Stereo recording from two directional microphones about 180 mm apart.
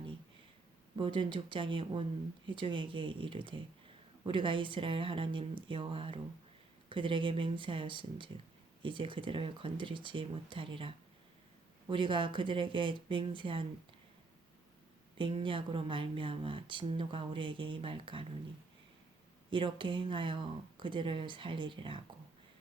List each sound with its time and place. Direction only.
0.9 s speech: 25° right (ahead or behind)
15.2 s speech: 30° right (ahead or behind)
19.5 s speech: 25° right (ahead or behind)